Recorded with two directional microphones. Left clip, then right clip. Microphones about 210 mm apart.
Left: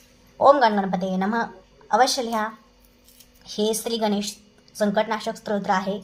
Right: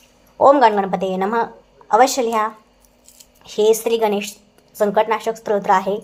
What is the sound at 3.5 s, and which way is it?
Speech, 30° right (ahead or behind).